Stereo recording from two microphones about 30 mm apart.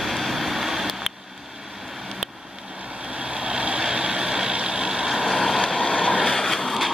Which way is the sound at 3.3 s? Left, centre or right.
Right.